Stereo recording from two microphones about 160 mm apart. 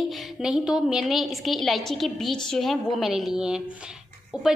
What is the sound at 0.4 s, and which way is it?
A woman's voice, 5° right (ahead or behind).